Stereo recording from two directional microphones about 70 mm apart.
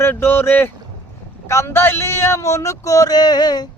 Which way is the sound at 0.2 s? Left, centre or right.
Left.